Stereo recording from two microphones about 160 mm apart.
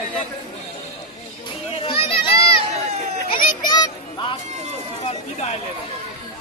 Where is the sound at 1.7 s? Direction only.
35° left (ahead or behind).